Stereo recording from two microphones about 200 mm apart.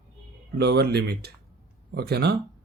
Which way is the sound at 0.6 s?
55° right (ahead or behind).